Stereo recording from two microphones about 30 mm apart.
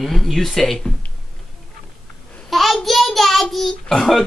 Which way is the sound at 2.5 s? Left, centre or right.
Centre.